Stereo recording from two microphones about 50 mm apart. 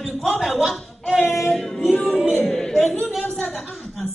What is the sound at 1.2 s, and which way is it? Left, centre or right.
Female singing, left.